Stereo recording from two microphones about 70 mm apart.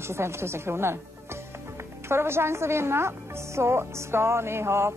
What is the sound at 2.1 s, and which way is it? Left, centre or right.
A woman's voice, right.